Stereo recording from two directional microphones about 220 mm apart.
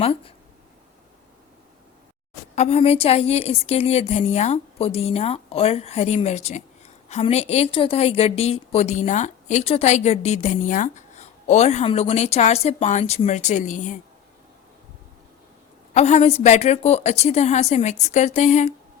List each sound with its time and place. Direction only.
0.0 s a woman's voice: 25° left (ahead or behind)
2.6 s a woman's voice: 30° left (ahead or behind)
16.0 s a woman's voice: 30° left (ahead or behind)